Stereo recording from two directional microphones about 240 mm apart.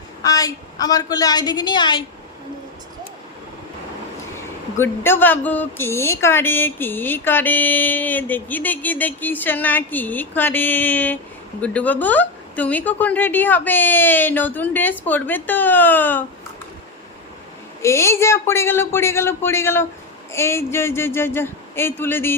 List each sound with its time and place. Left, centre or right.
0.2 s speech: centre
4.8 s speech: centre
17.8 s speech: centre